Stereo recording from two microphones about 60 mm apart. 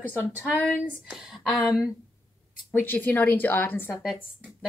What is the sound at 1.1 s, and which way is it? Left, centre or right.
Speech, centre.